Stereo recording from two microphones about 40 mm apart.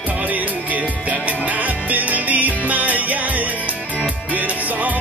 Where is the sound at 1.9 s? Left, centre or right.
Right.